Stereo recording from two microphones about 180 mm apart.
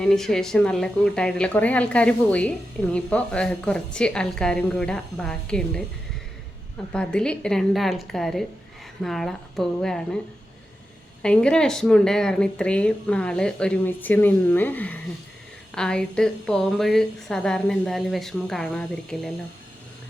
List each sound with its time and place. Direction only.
0.0 s speech: 5° left (ahead or behind)
6.9 s speech: 5° left (ahead or behind)
11.2 s speech: 5° left (ahead or behind)